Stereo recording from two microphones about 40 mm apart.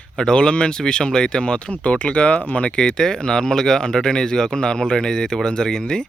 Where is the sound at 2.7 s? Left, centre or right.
Centre.